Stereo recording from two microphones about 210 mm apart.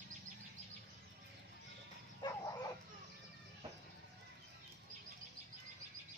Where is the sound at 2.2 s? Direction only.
20° left (ahead or behind).